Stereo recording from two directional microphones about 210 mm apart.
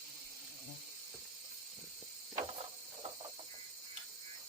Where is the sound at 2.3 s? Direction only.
25° right (ahead or behind).